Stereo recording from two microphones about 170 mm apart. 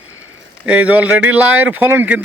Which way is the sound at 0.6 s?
10° right (ahead or behind).